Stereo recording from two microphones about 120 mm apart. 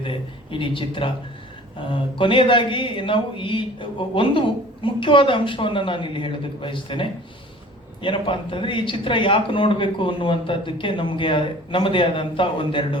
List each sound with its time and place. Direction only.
0.0 s speech: 45° left (ahead or behind)